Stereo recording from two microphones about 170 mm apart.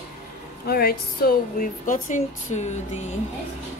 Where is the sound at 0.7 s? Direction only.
65° left (ahead or behind); by 3.0 s 45° left (ahead or behind).